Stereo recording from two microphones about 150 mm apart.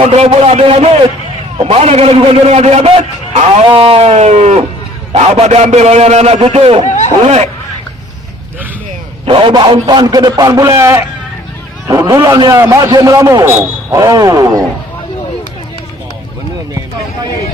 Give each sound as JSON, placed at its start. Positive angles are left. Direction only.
{"t": 0.2, "sound": "a man's voice", "side_deg": -40}
{"t": 6.8, "sound": "a sound", "side_deg": 50}
{"t": 7.3, "sound": "a man's voice", "side_deg": -45}
{"t": 9.2, "sound": "a man's voice", "side_deg": -35}